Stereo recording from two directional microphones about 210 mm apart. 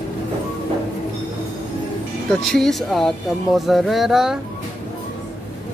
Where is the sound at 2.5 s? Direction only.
Centre (ahead or behind).